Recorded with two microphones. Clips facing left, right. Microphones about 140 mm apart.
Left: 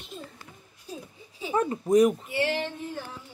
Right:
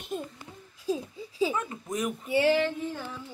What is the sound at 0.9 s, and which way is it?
Speech, 90° right.